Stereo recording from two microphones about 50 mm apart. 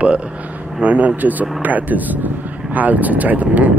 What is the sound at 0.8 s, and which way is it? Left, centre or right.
Speech, right.